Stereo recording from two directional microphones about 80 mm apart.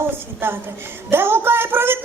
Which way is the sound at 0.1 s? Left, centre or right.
Right.